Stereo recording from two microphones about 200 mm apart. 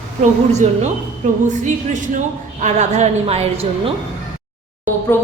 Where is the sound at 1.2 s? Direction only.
35° right (ahead or behind).